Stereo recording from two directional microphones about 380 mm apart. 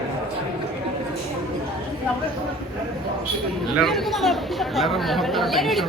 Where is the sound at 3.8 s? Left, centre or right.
Centre.